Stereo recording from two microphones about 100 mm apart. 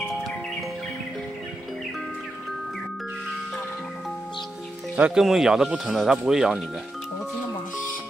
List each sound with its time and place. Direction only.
0.1 s music: centre (ahead or behind)
4.9 s speech: 15° right (ahead or behind)